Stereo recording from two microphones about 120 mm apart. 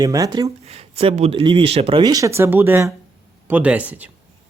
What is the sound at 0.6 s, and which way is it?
Speech, 60° right (ahead or behind).